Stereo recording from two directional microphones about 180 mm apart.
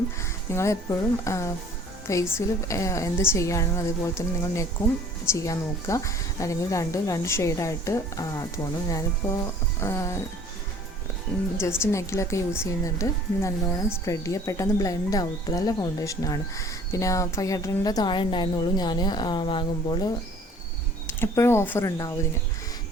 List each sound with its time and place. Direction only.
0.2 s speech: 15° left (ahead or behind)
11.5 s speech: 15° left (ahead or behind)
21.1 s speech: 15° left (ahead or behind)